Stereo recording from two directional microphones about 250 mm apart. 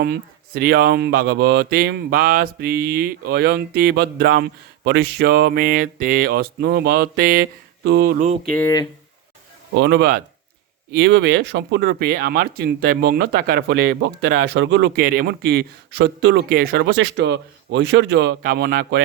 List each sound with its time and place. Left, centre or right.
0.0 s speech: right
8.4 s speech: centre
9.7 s speech: right